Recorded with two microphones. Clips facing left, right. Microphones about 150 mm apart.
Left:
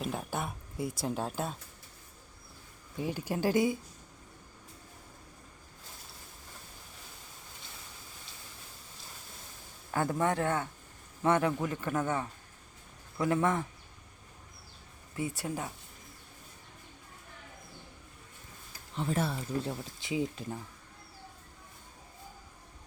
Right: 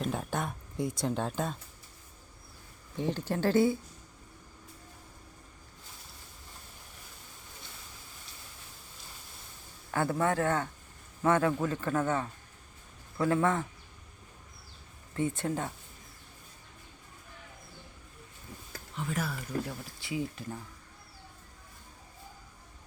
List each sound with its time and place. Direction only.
0.0 s a sound: 5° left (ahead or behind)
2.9 s speech: 10° left (ahead or behind)
9.9 s speech: 20° left (ahead or behind)
15.1 s speech: 10° left (ahead or behind)
18.9 s speech: 30° left (ahead or behind)